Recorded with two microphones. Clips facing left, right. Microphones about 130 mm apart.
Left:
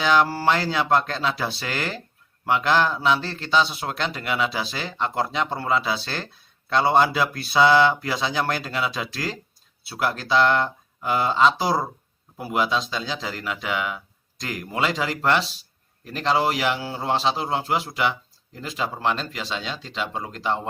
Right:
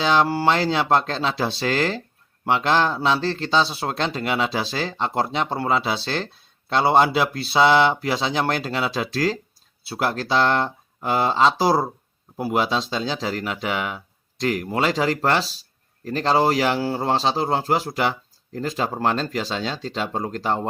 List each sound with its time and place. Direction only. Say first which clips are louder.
0.0 s a man's voice: right 1 dB; 25° right (ahead or behind)